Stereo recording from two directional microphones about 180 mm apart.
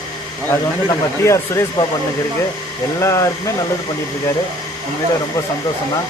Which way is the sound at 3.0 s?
15° left (ahead or behind).